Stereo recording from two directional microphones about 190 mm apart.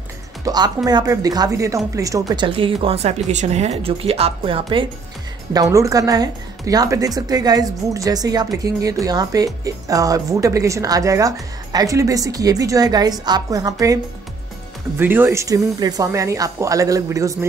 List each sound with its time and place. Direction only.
0.5 s a woman's voice: 20° right (ahead or behind)
15.0 s speech: 10° right (ahead or behind)